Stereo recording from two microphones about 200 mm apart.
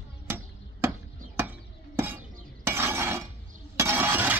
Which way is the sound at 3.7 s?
10° right (ahead or behind).